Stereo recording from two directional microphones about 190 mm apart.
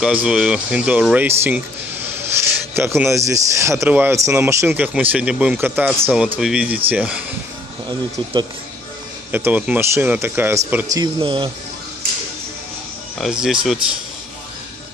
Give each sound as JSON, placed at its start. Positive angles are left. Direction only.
{"t": 0.0, "sound": "speech", "side_deg": -5}
{"t": 9.3, "sound": "speech", "side_deg": -10}
{"t": 11.0, "sound": "speech", "side_deg": -25}
{"t": 13.2, "sound": "speech", "side_deg": -5}